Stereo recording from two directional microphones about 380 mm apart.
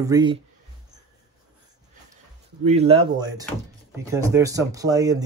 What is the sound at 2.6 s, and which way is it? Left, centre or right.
Speech, centre.